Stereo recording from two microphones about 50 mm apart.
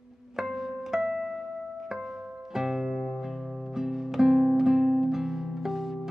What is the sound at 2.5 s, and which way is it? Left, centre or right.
Music, centre.